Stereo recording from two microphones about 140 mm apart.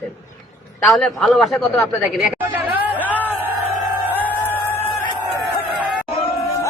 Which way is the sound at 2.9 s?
10° left (ahead or behind).